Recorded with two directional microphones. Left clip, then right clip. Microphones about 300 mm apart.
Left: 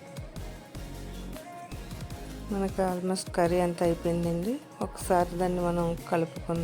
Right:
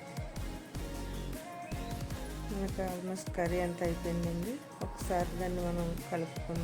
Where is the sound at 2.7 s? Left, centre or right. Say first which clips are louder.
Left 11 dB; left.